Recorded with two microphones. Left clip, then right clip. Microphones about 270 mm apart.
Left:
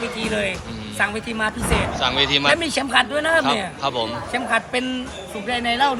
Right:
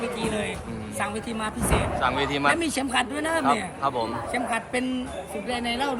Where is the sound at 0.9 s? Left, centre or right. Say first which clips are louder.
Left 7 dB; centre.